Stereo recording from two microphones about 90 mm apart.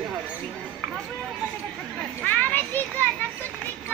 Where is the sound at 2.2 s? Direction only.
20° left (ahead or behind).